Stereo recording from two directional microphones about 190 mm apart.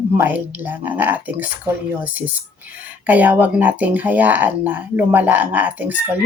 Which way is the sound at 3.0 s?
10° right (ahead or behind).